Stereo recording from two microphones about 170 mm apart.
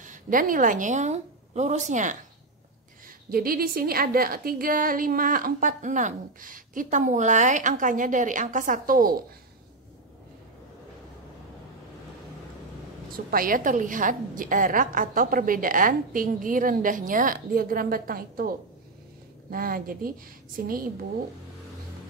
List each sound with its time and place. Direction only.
0.0 s a woman's voice: 50° right (ahead or behind)
3.3 s a woman's voice: 60° right (ahead or behind)
13.1 s a woman's voice: 55° right (ahead or behind)
19.5 s a woman's voice: 60° right (ahead or behind)